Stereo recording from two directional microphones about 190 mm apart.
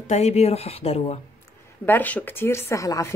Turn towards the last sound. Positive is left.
turn(degrees=15)  # may be behind; listen again after turning